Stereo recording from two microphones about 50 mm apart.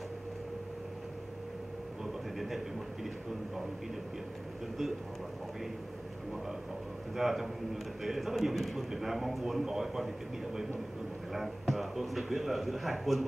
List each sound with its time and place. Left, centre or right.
2.3 s a man's voice: centre
7.2 s a man's voice: centre